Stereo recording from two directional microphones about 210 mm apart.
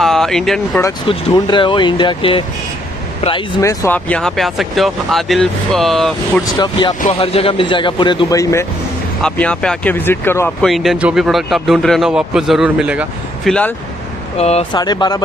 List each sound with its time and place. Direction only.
0.0 s a sound: centre (ahead or behind)
1.0 s speech: 20° left (ahead or behind); by 6.4 s centre (ahead or behind)
6.4 s speech: 20° left (ahead or behind)
10.7 s speech: centre (ahead or behind)
14.4 s speech: 30° left (ahead or behind)